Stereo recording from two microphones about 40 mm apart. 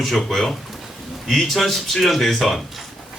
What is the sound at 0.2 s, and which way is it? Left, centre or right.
A man's voice, centre.